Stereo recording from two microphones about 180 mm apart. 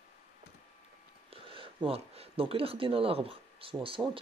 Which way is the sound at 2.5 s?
30° right (ahead or behind).